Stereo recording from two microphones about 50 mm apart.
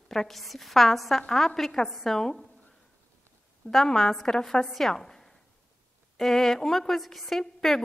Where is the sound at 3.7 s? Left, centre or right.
Centre.